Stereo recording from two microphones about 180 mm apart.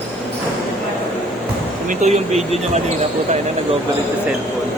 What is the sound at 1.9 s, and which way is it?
Speech, 40° right (ahead or behind).